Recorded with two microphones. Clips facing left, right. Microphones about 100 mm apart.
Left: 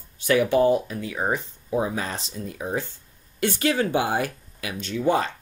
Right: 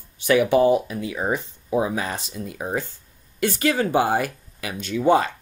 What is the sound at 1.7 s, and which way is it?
Speech, 90° right.